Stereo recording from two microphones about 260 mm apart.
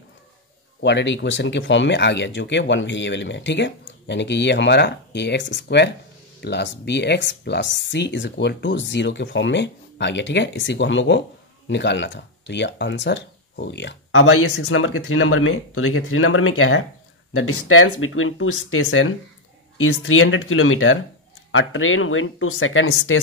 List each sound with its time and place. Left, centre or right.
0.7 s speech: left